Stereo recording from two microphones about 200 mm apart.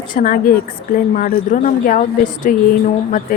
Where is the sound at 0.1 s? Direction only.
45° left (ahead or behind).